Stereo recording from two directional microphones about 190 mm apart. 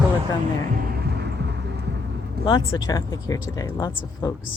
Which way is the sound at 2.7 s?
20° left (ahead or behind).